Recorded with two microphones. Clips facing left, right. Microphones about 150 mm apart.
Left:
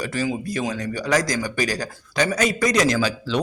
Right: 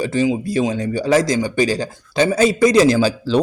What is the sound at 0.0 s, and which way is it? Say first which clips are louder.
A man's voice: right 7 dB; 25° right (ahead or behind).